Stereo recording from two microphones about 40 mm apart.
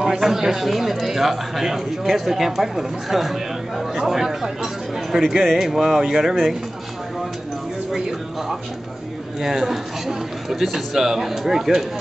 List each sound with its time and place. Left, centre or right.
0.0 s a man's voice: centre
5.1 s speech: right
5.6 s a man's voice: centre
9.4 s a man's voice: centre